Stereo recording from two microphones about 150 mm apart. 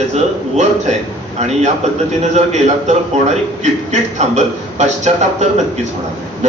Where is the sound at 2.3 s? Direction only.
50° right (ahead or behind).